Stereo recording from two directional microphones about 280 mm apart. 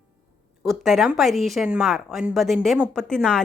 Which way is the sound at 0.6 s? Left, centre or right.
Centre.